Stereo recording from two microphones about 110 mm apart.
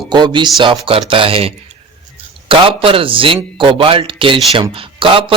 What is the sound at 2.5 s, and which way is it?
A man's voice, 55° right (ahead or behind).